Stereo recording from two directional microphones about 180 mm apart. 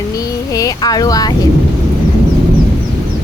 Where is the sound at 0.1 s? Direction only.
20° left (ahead or behind).